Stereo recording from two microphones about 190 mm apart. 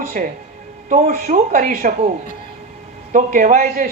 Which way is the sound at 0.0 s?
45° right (ahead or behind).